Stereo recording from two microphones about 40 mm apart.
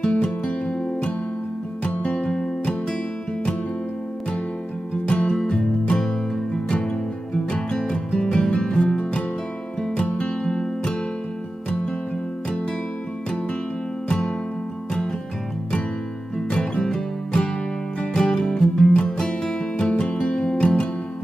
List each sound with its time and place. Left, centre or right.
0.0 s music: left
5.0 s music: left
10.4 s music: centre
14.0 s music: centre
16.3 s music: centre